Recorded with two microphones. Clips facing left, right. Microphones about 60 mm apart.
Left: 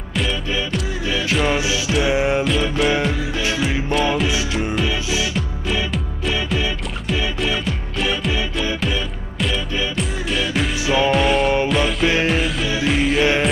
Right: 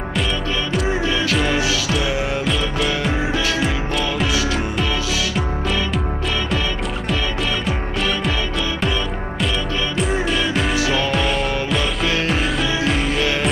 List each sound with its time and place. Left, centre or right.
2.0 s music: left
2.4 s music: centre
4.3 s music: left
7.6 s music: centre
9.9 s music: centre
10.8 s music: centre
11.1 s music: centre